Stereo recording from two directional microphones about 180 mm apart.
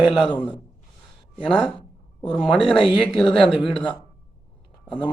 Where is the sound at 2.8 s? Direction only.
30° left (ahead or behind).